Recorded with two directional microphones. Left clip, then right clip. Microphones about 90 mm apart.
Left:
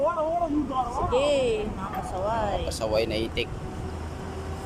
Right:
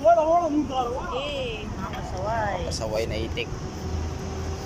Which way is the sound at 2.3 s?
25° left (ahead or behind).